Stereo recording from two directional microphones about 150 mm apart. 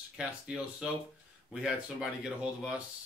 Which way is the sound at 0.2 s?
5° right (ahead or behind).